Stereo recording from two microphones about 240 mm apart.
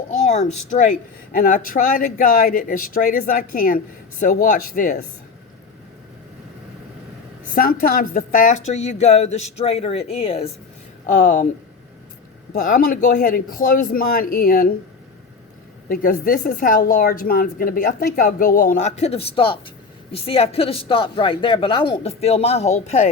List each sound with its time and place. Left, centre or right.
0.1 s a woman's voice: left
7.5 s a woman's voice: left
12.6 s a woman's voice: left
15.9 s a woman's voice: left